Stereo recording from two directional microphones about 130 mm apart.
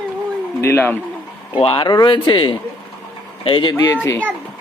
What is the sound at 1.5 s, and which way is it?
Speech, 45° left (ahead or behind).